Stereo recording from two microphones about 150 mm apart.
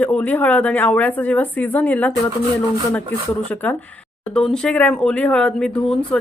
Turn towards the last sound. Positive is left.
turn(degrees=5)  # may be behind; listen again after turning